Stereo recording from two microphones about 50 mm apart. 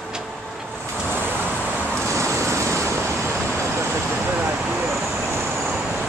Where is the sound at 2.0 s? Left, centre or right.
Right.